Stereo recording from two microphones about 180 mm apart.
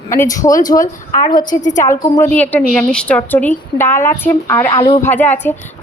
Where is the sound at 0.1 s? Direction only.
15° left (ahead or behind).